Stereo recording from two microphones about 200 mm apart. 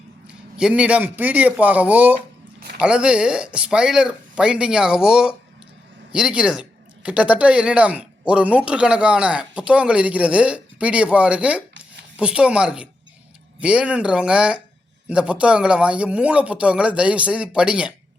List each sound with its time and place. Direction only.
0.3 s a man's voice: 5° right (ahead or behind)